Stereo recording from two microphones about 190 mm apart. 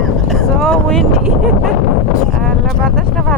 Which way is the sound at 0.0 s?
Centre (ahead or behind).